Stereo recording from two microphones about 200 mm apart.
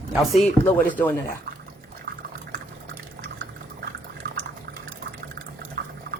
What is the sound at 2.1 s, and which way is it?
Liquid, 45° right (ahead or behind).